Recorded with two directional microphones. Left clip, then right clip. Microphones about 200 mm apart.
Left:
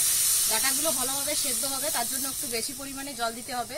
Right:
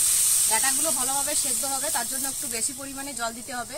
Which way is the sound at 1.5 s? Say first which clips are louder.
Right 2 dB; 15° right (ahead or behind).